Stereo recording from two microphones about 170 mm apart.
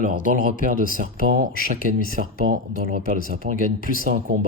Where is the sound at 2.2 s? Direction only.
55° right (ahead or behind).